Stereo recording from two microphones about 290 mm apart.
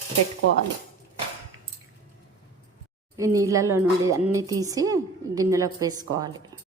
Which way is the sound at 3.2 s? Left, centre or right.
Centre.